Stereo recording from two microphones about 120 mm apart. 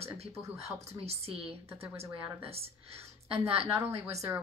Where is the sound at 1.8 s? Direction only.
20° right (ahead or behind).